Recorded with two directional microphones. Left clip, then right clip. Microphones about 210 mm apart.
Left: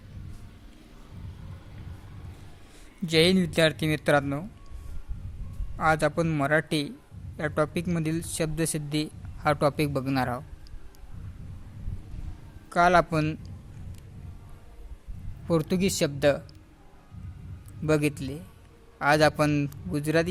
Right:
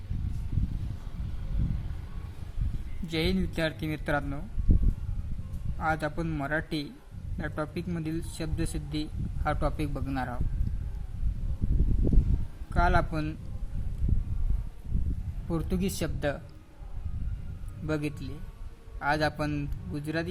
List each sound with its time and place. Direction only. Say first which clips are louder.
3.1 s a man's voice: left 9 dB; 50° left (ahead or behind)
5.8 s a man's voice: left 6 dB; 50° left (ahead or behind)
12.7 s a man's voice: left 7 dB; 50° left (ahead or behind)
15.4 s a man's voice: left 7 dB; 45° left (ahead or behind)
17.8 s a man's voice: left 8 dB; 50° left (ahead or behind)